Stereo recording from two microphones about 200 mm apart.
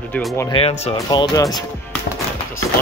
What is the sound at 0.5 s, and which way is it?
Speech, 30° left (ahead or behind).